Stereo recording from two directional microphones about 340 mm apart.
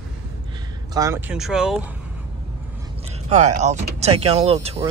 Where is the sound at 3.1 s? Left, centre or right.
Centre.